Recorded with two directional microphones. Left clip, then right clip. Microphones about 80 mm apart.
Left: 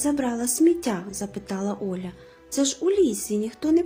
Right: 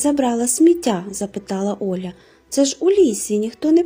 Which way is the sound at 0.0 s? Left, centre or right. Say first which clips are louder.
Right 7 dB; right.